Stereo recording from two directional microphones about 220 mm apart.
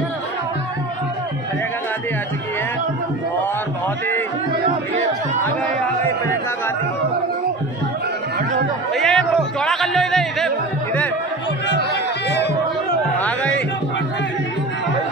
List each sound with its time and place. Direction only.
8.9 s music: centre (ahead or behind)
11.7 s music: 50° left (ahead or behind)